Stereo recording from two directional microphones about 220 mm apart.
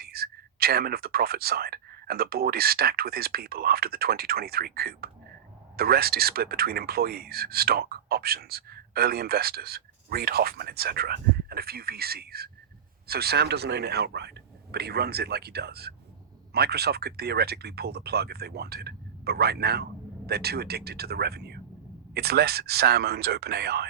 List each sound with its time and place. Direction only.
0.0 s speech: 45° right (ahead or behind)